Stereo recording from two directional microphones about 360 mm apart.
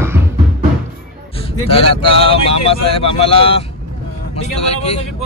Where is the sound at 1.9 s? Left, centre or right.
Centre.